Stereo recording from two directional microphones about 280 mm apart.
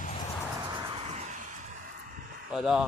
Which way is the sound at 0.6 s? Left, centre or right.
Centre.